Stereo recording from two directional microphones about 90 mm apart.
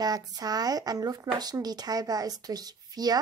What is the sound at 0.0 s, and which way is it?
Speech, 45° right (ahead or behind).